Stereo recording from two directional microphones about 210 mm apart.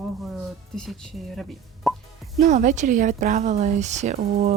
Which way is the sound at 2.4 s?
35° right (ahead or behind).